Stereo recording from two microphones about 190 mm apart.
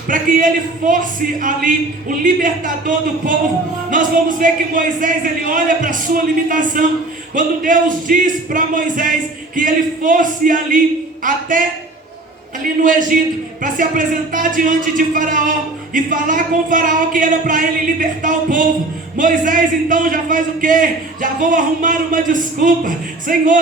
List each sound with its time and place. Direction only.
0.1 s speech: 45° right (ahead or behind)
12.6 s speech: 45° right (ahead or behind)